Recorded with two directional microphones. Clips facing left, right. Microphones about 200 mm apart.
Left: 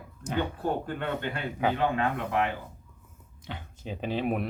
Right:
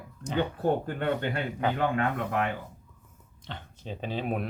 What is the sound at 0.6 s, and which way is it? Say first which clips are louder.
Speech: right 3 dB; 45° right (ahead or behind).